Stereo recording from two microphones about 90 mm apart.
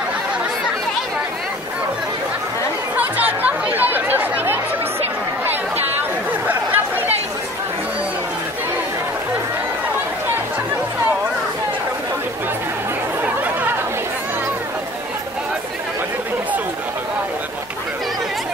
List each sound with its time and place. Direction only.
3.0 s chatter: 20° right (ahead or behind)
6.4 s chatter: 20° right (ahead or behind)
13.2 s chatter: 20° right (ahead or behind)